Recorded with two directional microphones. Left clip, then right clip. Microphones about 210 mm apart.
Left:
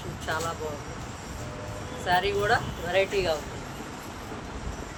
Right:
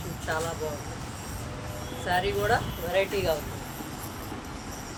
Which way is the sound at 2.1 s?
30° left (ahead or behind).